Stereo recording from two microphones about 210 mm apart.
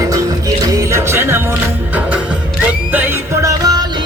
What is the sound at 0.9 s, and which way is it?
Music, 10° right (ahead or behind).